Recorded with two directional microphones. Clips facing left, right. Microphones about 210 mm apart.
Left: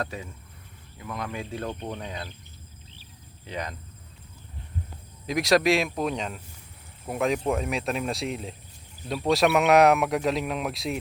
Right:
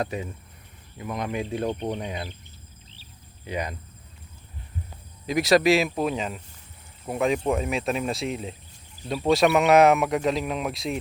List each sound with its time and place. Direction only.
0.0 s speech: 15° right (ahead or behind)
3.4 s speech: 10° right (ahead or behind)
5.2 s speech: centre (ahead or behind)